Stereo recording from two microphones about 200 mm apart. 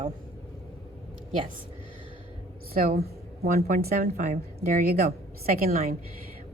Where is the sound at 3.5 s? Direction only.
35° right (ahead or behind).